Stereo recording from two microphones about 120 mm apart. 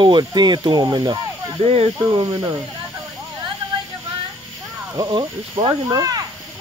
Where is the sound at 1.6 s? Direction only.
50° right (ahead or behind).